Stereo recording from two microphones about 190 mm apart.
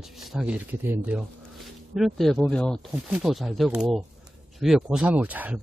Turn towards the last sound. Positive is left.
turn(degrees=-10)  # may be behind; listen again after turning